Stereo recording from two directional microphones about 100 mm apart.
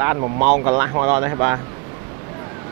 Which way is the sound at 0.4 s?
20° right (ahead or behind).